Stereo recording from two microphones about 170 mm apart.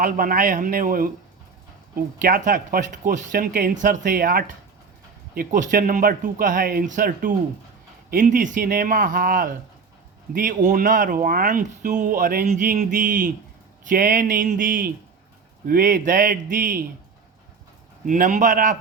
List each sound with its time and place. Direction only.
0.0 s a man's voice: 55° right (ahead or behind)
2.2 s speech: 50° right (ahead or behind)
12.5 s speech: 45° right (ahead or behind)
18.0 s speech: 50° right (ahead or behind)